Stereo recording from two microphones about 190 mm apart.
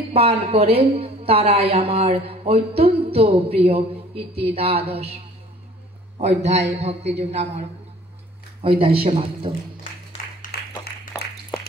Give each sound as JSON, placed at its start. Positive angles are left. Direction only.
{"t": 0.1, "sound": "a woman's voice", "side_deg": -30}
{"t": 8.6, "sound": "a man's voice", "side_deg": -30}
{"t": 10.5, "sound": "a sound", "side_deg": 55}